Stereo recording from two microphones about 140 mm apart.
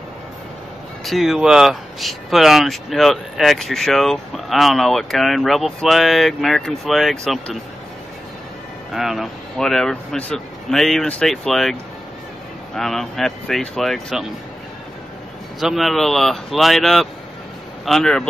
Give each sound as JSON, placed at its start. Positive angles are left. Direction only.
{"t": 1.0, "sound": "speech", "side_deg": 0}
{"t": 8.9, "sound": "speech", "side_deg": 0}
{"t": 15.6, "sound": "speech", "side_deg": 0}